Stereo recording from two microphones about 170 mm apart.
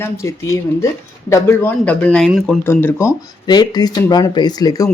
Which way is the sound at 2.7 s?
15° left (ahead or behind).